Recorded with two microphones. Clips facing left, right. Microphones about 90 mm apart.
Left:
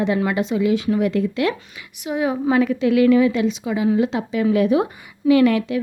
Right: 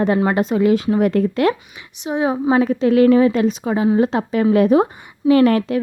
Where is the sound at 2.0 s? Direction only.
30° right (ahead or behind).